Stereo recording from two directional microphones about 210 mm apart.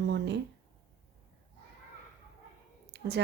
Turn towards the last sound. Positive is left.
turn(degrees=-50)  # may be behind; listen again after turning